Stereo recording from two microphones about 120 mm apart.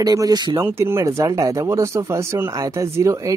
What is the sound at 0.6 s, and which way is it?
Speech, 20° right (ahead or behind).